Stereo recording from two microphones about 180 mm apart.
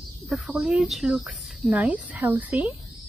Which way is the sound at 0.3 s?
5° right (ahead or behind).